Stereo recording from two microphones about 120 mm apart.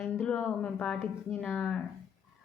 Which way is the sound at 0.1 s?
10° left (ahead or behind).